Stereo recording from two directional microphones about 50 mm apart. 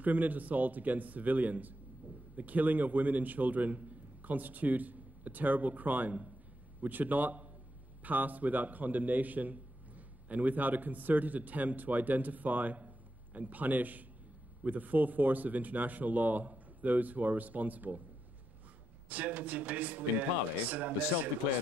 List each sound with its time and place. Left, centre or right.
0.0 s a man's voice: right
19.0 s a man's voice: right